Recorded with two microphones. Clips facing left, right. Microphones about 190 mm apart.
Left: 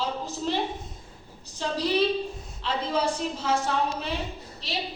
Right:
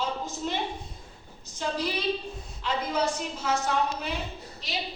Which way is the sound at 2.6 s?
30° left (ahead or behind).